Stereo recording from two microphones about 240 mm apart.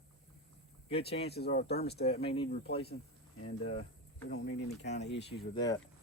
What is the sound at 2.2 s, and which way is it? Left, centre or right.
Speech, left.